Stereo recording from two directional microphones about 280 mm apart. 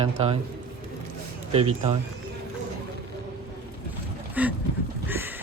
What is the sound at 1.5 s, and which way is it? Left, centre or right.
Speech, centre.